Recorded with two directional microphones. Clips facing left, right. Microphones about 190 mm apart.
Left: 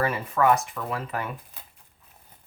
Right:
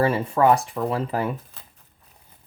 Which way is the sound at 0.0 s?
30° right (ahead or behind).